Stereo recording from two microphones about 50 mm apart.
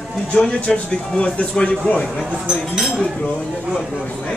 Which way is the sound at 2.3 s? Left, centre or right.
Centre.